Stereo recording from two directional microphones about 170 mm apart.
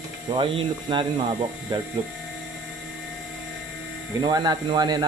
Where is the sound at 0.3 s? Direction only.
30° right (ahead or behind).